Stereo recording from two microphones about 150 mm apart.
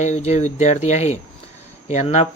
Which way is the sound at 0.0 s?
50° left (ahead or behind).